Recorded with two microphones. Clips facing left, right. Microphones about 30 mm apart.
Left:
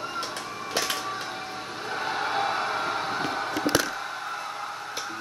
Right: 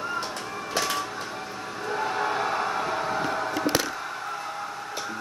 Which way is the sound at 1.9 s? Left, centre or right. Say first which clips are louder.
Right 2 dB; centre.